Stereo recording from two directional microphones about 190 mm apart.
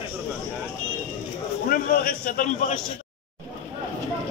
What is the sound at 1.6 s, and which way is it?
A man's voice, 50° left (ahead or behind).